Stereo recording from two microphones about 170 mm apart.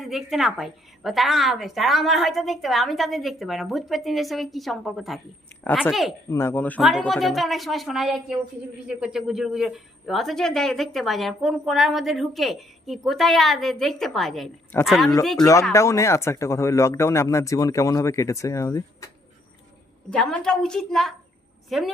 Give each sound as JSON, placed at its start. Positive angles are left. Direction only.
{"t": 0.0, "sound": "speech", "side_deg": 0}
{"t": 6.3, "sound": "speech", "side_deg": 15}
{"t": 15.4, "sound": "speech", "side_deg": 20}
{"t": 20.1, "sound": "speech", "side_deg": 5}